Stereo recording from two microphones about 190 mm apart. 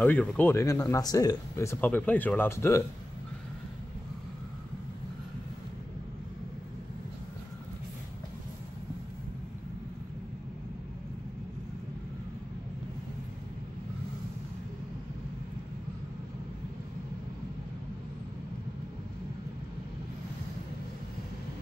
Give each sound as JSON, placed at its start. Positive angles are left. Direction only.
{"t": 0.0, "sound": "speech", "side_deg": 5}